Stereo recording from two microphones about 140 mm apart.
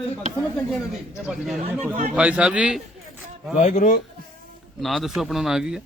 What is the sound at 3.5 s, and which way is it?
Speech, 60° left (ahead or behind).